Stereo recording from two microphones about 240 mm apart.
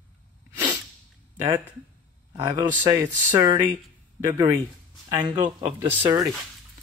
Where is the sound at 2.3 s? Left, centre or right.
Centre.